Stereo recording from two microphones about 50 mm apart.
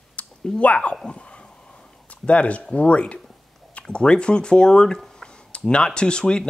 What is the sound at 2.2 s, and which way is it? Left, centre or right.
Speech, left.